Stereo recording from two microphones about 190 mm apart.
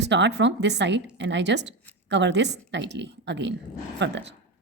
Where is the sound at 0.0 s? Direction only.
65° right (ahead or behind).